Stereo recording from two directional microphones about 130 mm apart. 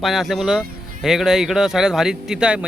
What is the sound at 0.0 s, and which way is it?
A man's voice, centre (ahead or behind).